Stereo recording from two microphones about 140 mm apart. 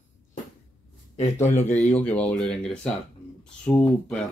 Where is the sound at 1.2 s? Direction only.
15° left (ahead or behind).